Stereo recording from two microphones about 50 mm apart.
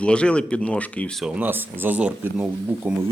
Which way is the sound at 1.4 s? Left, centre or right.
Right.